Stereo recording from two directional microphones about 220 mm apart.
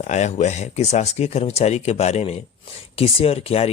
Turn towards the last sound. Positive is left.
turn(degrees=25)  # may be behind; listen again after turning